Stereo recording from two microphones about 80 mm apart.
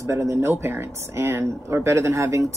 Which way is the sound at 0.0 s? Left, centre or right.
Right.